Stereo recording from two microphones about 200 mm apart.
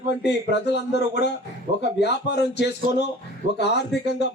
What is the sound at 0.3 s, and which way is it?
A man's voice, 55° left (ahead or behind).